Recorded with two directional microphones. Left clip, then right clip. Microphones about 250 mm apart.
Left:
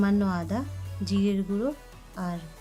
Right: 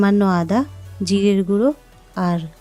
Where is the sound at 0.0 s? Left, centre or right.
Right.